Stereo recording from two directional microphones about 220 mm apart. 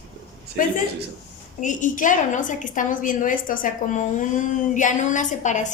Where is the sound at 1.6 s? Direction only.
35° left (ahead or behind).